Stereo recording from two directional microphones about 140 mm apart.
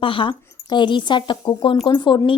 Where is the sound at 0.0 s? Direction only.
40° left (ahead or behind).